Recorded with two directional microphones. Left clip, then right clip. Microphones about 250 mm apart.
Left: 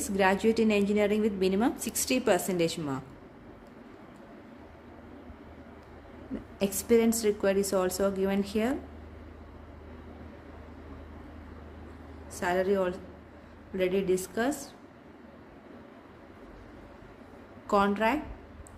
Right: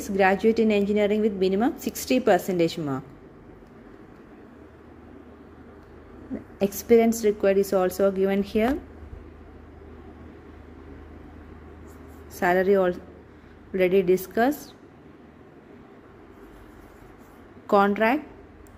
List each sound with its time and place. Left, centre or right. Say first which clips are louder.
0.0 s a woman's voice: right 5 dB; centre
6.6 s a woman's voice: right 6 dB; centre
12.4 s a woman's voice: right 7 dB; right
17.6 s a woman's voice: right 6 dB; centre